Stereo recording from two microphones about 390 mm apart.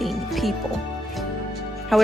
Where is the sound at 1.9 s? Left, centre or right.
Centre.